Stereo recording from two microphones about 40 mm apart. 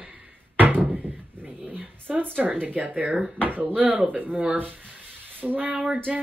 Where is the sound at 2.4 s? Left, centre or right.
Right.